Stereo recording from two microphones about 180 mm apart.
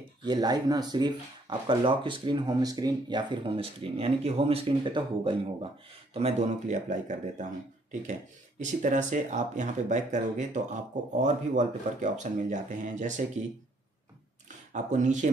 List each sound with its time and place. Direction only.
0.2 s speech: 25° right (ahead or behind); by 13.2 s 45° right (ahead or behind)
14.7 s speech: 45° right (ahead or behind)